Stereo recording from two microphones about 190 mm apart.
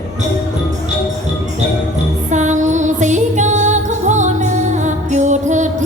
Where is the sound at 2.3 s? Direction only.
40° right (ahead or behind).